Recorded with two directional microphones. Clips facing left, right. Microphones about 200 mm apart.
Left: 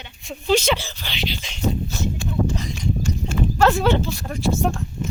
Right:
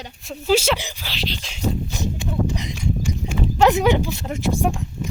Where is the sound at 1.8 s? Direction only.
15° right (ahead or behind).